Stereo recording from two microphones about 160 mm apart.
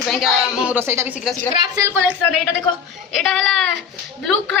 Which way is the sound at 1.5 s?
30° right (ahead or behind).